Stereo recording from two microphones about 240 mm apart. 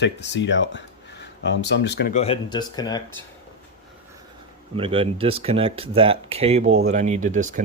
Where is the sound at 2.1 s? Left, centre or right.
Left.